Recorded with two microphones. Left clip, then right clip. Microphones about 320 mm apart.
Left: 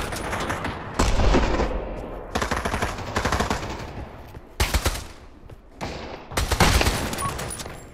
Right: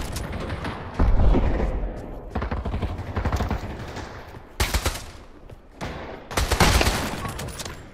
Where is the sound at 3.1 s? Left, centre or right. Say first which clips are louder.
Left 5 dB; left.